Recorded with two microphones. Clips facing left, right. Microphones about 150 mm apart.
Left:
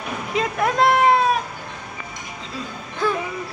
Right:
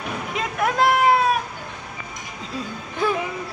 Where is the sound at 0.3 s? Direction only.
Centre (ahead or behind).